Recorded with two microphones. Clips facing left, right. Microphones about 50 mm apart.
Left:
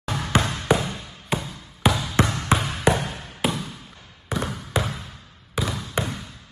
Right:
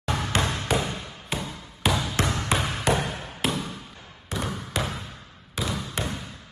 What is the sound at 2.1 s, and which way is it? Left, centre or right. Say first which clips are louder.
Basketball bounce: left 3 dB; centre.